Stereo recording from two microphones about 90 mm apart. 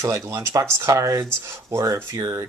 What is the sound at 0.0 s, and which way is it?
Speech, 35° right (ahead or behind).